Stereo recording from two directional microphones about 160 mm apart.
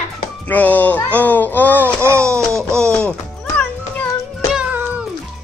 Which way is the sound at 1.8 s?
15° right (ahead or behind).